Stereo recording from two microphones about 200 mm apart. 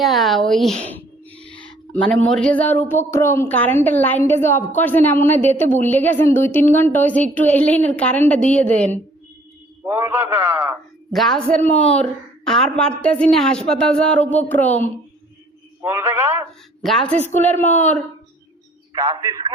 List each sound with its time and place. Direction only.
0.0 s a woman's voice: centre (ahead or behind)
0.9 s a sound: 10° left (ahead or behind)
2.3 s a woman's voice: 5° left (ahead or behind)
9.8 s a man's voice: 10° right (ahead or behind)
11.1 s a woman's voice: centre (ahead or behind)
15.8 s a sound: 10° right (ahead or behind)
16.8 s a woman's voice: centre (ahead or behind)
18.9 s a man's voice: 20° right (ahead or behind)